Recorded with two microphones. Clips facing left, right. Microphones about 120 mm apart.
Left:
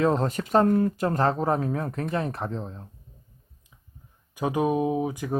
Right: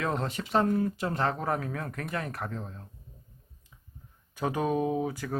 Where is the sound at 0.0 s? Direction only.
30° left (ahead or behind).